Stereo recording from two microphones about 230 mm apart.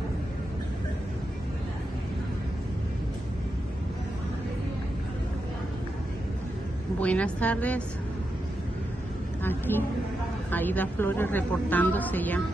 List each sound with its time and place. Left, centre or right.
7.0 s a woman's voice: centre
9.4 s a woman's voice: centre